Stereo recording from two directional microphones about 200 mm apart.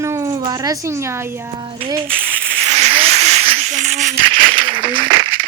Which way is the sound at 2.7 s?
35° right (ahead or behind).